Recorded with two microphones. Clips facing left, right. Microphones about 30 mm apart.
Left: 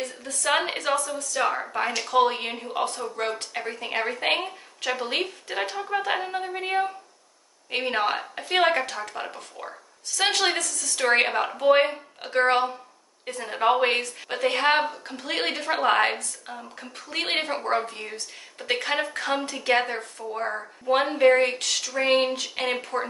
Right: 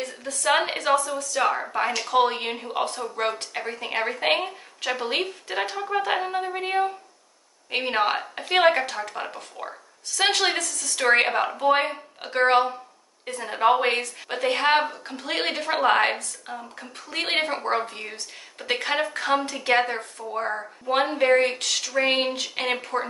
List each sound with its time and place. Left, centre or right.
0.2 s a woman's voice: centre